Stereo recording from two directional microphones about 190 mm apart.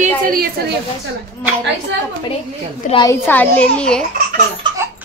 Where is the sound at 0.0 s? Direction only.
50° right (ahead or behind).